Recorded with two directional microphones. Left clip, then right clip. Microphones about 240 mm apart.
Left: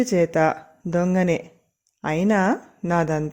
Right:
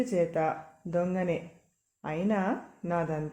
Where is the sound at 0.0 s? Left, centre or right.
Left.